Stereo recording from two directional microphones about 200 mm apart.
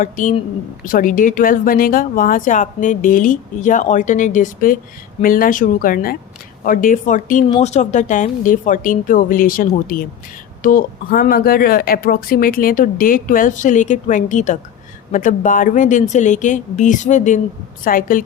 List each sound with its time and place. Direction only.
0.0 s speech: 40° left (ahead or behind)